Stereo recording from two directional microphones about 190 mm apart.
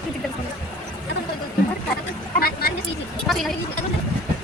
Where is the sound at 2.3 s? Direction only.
50° left (ahead or behind).